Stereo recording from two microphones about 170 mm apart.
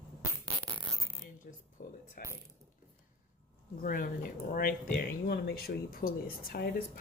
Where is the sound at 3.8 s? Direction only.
55° left (ahead or behind).